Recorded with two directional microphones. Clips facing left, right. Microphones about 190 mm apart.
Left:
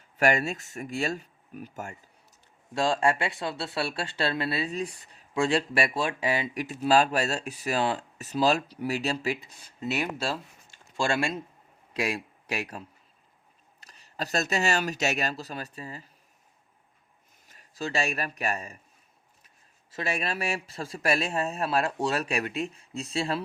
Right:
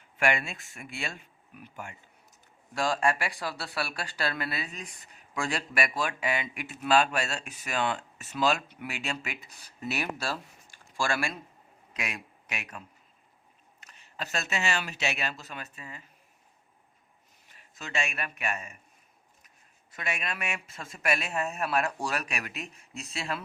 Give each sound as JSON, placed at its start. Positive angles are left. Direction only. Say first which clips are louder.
{"t": 0.2, "sound": "speech", "louder": "left 4 dB", "side_deg": 40}
{"t": 2.7, "sound": "speech", "louder": "left 3 dB", "side_deg": 25}
{"t": 13.8, "sound": "speech", "louder": "left 4 dB", "side_deg": 35}
{"t": 17.5, "sound": "speech", "louder": "left 6 dB", "side_deg": 35}
{"t": 19.9, "sound": "speech", "louder": "left 5 dB", "side_deg": 30}